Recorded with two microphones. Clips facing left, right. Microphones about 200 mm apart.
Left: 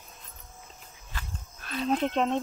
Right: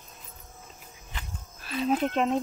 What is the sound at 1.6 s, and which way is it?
Speech, 5° right (ahead or behind).